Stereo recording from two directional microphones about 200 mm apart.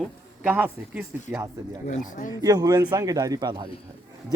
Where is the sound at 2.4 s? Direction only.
20° right (ahead or behind).